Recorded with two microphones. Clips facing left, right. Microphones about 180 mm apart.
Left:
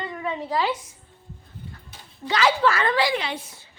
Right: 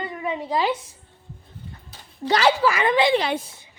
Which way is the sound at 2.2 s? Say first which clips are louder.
Right 3 dB; 40° right (ahead or behind).